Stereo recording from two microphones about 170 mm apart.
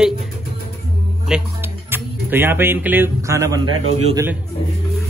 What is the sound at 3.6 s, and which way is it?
Speech, 40° right (ahead or behind).